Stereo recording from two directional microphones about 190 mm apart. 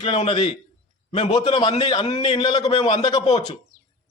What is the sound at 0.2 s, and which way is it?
A man's voice, 25° left (ahead or behind).